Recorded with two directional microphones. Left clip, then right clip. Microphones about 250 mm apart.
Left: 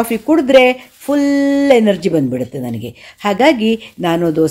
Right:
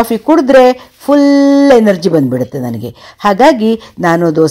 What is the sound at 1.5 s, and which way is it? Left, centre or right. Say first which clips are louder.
Speech: right 4 dB; centre.